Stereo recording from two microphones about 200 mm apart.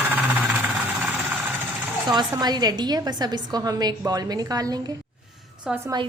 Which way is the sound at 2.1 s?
20° right (ahead or behind).